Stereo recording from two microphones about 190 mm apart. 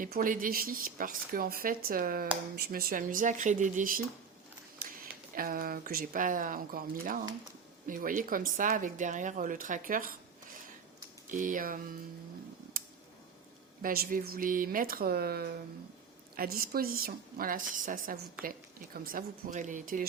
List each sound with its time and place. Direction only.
0.0 s speech: 45° right (ahead or behind)
11.3 s speech: 45° right (ahead or behind)
12.7 s a sound: 50° right (ahead or behind)
13.8 s speech: 50° right (ahead or behind)
18.4 s a woman's voice: 5° right (ahead or behind)
19.0 s speech: 45° right (ahead or behind)